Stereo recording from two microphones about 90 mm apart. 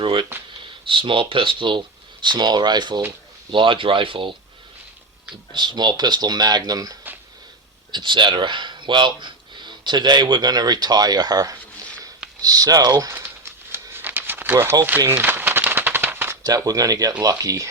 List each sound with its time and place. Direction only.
0.0 s a sound: 70° right (ahead or behind)
0.9 s speech: 70° right (ahead or behind)
2.2 s speech: 55° right (ahead or behind)
3.5 s speech: 70° right (ahead or behind)
5.5 s speech: 55° right (ahead or behind)
7.9 s speech: 60° right (ahead or behind)
13.1 s crumpling: 25° right (ahead or behind)
16.4 s speech: 45° right (ahead or behind)